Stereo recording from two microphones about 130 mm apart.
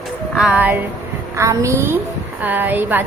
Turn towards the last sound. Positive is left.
turn(degrees=-15)  # may be behind; listen again after turning